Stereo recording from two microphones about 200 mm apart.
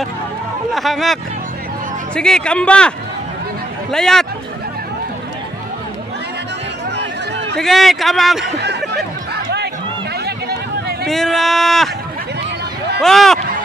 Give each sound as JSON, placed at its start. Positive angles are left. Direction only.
{"t": 0.7, "sound": "speech", "side_deg": 0}
{"t": 3.9, "sound": "speech", "side_deg": 0}
{"t": 7.5, "sound": "speech", "side_deg": 0}
{"t": 8.9, "sound": "music", "side_deg": -55}
{"t": 10.2, "sound": "run", "side_deg": -55}
{"t": 11.1, "sound": "speech", "side_deg": 0}
{"t": 13.0, "sound": "speech", "side_deg": 0}